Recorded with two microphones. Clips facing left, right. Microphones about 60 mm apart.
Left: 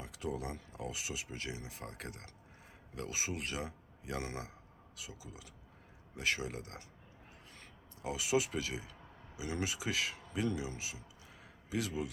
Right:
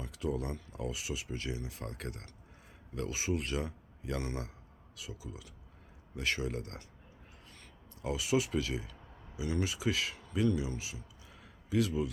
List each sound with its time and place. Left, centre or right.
0.0 s a man's voice: left
8.0 s speech: centre